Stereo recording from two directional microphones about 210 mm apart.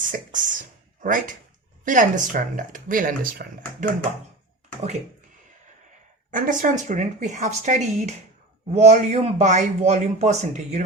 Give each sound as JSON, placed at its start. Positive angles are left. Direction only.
{"t": 0.0, "sound": "a sound", "side_deg": -40}
{"t": 1.0, "sound": "a man's voice", "side_deg": -40}
{"t": 6.3, "sound": "a man's voice", "side_deg": -40}